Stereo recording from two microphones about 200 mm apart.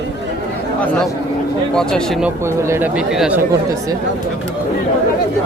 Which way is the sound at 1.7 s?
5° left (ahead or behind).